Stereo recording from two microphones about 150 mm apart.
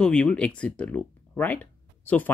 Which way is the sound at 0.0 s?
5° left (ahead or behind).